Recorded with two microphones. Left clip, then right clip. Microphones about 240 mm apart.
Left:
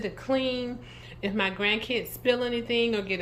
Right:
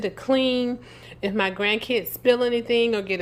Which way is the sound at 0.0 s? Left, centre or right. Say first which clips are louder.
Right 6 dB; right.